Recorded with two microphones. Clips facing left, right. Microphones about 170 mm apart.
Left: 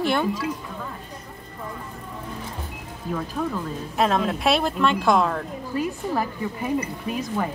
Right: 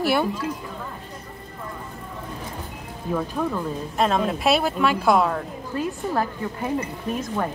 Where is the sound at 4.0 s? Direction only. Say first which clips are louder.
Even; centre (ahead or behind).